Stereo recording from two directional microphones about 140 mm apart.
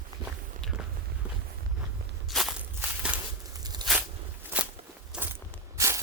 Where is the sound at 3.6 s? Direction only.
30° right (ahead or behind).